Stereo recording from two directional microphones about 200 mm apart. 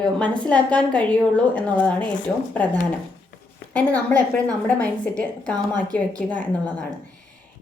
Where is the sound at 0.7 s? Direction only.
5° left (ahead or behind).